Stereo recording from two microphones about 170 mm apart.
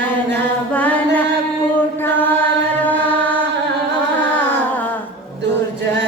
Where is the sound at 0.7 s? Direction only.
10° left (ahead or behind).